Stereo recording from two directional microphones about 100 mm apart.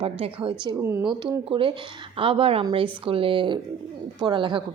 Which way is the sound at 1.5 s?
65° right (ahead or behind).